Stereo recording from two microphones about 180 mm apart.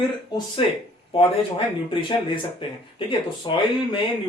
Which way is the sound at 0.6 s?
30° left (ahead or behind).